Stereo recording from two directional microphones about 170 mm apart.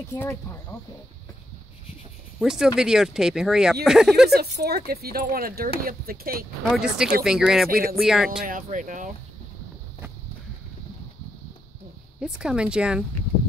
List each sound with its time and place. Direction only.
0.2 s speech: 15° left (ahead or behind)
2.3 s speech: 5° right (ahead or behind)
4.4 s speech: 65° right (ahead or behind)
6.6 s speech: 5° right (ahead or behind)
8.5 s speech: 50° right (ahead or behind)
12.2 s speech: 5° right (ahead or behind)